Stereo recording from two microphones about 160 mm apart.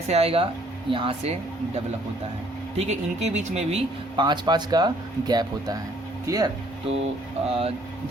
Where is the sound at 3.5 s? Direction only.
40° right (ahead or behind).